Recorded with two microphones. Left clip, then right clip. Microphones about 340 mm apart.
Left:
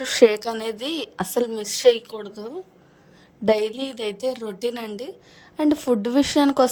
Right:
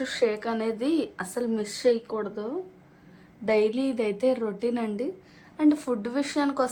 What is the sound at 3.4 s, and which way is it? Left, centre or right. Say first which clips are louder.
Speech: left 3 dB; left.